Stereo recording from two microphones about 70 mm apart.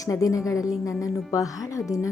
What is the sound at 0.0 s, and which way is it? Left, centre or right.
A woman's voice, left.